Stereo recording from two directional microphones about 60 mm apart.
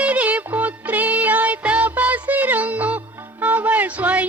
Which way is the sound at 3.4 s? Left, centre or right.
Right.